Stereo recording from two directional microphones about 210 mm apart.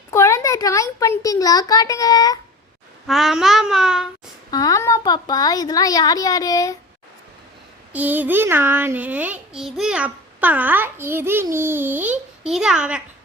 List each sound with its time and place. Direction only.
0.1 s a child's voice: 15° left (ahead or behind)
3.1 s child singing: centre (ahead or behind)
4.5 s a woman's voice: 15° left (ahead or behind)
7.9 s a child's voice: 10° right (ahead or behind)